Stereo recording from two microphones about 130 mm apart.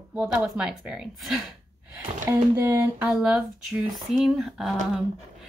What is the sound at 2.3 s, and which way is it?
Speech, 25° right (ahead or behind).